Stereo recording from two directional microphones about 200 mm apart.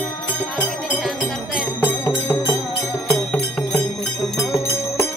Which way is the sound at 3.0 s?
5° left (ahead or behind).